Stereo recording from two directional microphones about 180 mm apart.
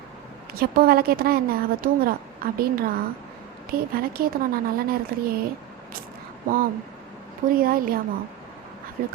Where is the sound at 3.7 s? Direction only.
55° right (ahead or behind).